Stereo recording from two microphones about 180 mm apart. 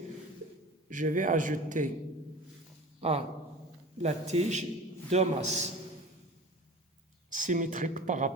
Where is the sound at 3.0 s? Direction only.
35° right (ahead or behind).